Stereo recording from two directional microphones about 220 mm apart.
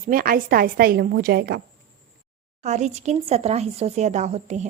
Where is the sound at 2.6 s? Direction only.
30° right (ahead or behind).